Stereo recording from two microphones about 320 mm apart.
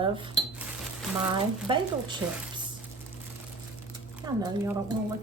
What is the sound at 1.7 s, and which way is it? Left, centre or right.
Speech, centre.